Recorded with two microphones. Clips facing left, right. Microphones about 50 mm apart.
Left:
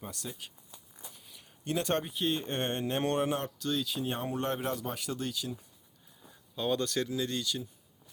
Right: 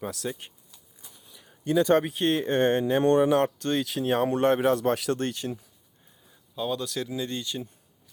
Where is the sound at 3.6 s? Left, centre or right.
Right.